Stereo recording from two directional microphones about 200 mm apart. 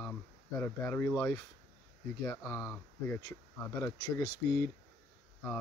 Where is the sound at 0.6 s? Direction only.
10° left (ahead or behind).